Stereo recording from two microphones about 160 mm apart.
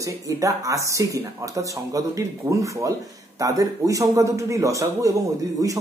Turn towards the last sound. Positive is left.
turn(degrees=-20)  # may be behind; listen again after turning